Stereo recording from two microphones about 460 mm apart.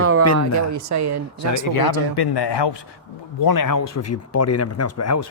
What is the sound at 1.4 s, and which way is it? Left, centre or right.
Speech, left.